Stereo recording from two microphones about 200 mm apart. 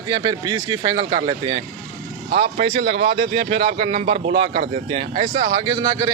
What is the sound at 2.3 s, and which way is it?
Speech, 45° right (ahead or behind).